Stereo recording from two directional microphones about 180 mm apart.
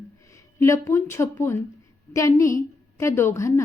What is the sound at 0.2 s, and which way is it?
A woman's voice, 15° left (ahead or behind).